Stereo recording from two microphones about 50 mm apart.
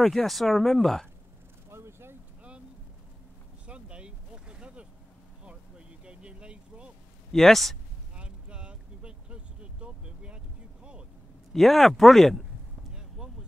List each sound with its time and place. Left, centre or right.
0.0 s speech: centre
1.7 s a sound: right
3.6 s vehicle: right
6.0 s vehicle: right
7.3 s speech: centre
8.2 s vehicle: right
11.5 s speech: centre
13.2 s a sound: centre